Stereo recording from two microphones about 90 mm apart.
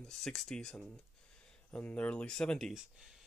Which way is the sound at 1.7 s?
15° left (ahead or behind).